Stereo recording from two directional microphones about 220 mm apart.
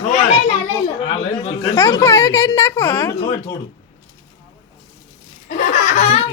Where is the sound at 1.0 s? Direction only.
25° left (ahead or behind).